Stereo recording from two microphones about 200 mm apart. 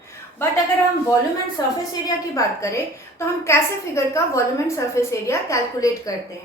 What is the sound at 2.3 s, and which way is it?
A woman's voice, 15° left (ahead or behind).